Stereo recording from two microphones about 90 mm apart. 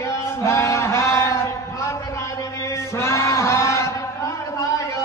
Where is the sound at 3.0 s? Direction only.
30° left (ahead or behind).